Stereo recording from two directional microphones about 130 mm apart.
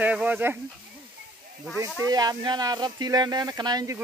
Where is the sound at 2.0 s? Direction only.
30° right (ahead or behind).